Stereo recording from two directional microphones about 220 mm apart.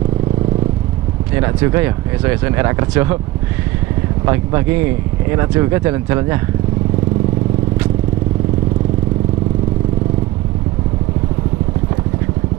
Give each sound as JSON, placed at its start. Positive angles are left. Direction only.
{"t": 1.4, "sound": "speech", "side_deg": -15}
{"t": 4.3, "sound": "speech", "side_deg": -15}